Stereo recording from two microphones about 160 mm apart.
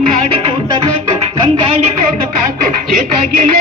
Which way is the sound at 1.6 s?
35° right (ahead or behind).